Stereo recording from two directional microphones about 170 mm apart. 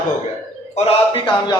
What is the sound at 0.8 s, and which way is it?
Speech, 35° left (ahead or behind).